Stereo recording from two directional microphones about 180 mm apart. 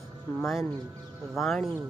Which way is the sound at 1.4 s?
Centre (ahead or behind).